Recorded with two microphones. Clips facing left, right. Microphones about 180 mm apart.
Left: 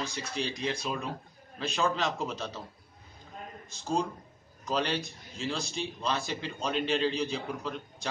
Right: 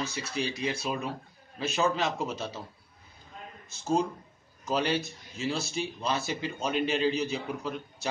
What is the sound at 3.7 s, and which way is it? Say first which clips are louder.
A man's voice: right 3 dB; 5° right (ahead or behind).